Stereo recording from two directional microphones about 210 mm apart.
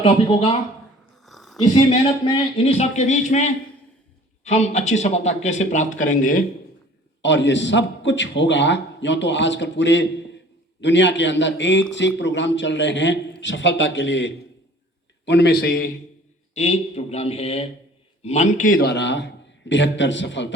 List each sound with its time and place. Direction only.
0.0 s speech: 25° left (ahead or behind)
1.2 s a sound: centre (ahead or behind)
1.6 s speech: 30° left (ahead or behind)
7.2 s a man's voice: 60° left (ahead or behind)
16.6 s a man's voice: 30° left (ahead or behind); by 20.5 s 60° left (ahead or behind)